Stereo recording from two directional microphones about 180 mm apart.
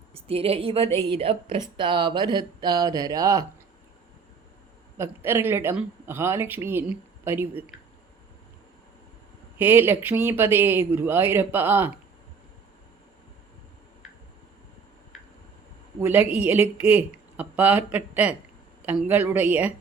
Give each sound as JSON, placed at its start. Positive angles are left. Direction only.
{"t": 0.1, "sound": "a woman's voice", "side_deg": -35}
{"t": 4.9, "sound": "speech", "side_deg": -10}
{"t": 9.6, "sound": "speech", "side_deg": -10}
{"t": 16.0, "sound": "speech", "side_deg": -10}